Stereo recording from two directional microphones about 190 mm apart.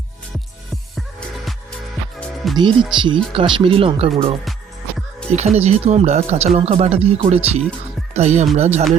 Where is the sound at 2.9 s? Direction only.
25° right (ahead or behind).